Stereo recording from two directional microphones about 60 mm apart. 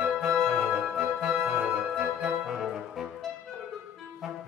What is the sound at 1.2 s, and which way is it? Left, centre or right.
Brass instrument, centre.